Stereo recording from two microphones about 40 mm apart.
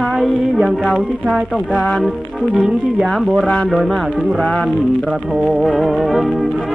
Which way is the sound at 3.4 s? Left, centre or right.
Left.